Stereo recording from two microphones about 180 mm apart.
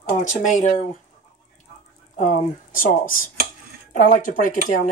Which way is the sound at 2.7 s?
50° left (ahead or behind).